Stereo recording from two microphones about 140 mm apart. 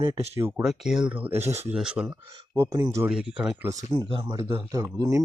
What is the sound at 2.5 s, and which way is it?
Speech, 25° right (ahead or behind).